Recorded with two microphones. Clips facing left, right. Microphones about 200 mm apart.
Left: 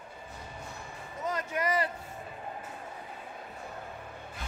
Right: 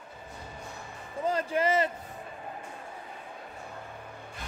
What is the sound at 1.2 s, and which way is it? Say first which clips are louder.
Speech: right 5 dB; 30° right (ahead or behind).